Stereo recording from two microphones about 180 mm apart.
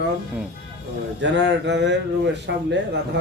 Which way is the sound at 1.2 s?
80° right.